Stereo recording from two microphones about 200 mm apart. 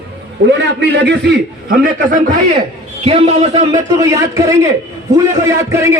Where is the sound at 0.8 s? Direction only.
55° right (ahead or behind).